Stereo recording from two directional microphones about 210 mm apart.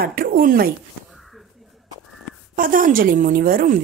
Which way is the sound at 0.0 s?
45° right (ahead or behind).